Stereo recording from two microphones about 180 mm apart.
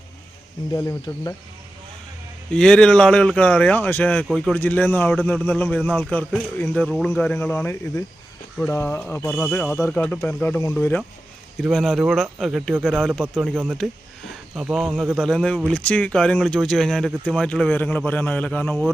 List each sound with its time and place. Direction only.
0.7 s speech: 15° left (ahead or behind)
2.5 s speech: 5° left (ahead or behind)
11.6 s speech: centre (ahead or behind)